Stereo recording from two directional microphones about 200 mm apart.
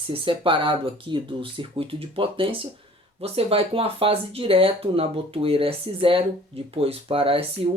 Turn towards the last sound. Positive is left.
turn(degrees=-25)  # may be behind; listen again after turning